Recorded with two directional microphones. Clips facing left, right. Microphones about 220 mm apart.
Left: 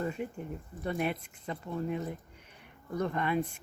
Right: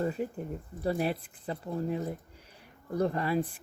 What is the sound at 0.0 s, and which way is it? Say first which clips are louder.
Speech: right 3 dB; 35° right (ahead or behind).